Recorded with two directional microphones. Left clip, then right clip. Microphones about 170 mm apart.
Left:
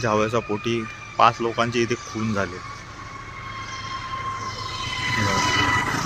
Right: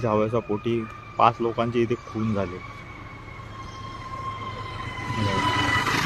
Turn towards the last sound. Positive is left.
turn(degrees=35)  # may be behind; listen again after turning